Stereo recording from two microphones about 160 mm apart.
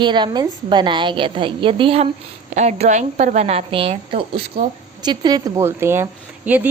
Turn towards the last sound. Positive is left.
turn(degrees=-10)  # may be behind; listen again after turning